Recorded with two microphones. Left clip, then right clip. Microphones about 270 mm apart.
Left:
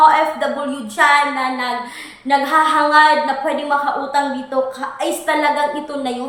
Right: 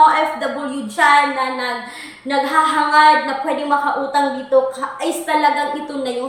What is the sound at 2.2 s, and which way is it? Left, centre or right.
A woman's voice, centre.